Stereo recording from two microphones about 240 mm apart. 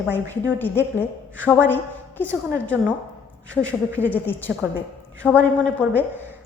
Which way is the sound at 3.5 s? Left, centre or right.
Centre.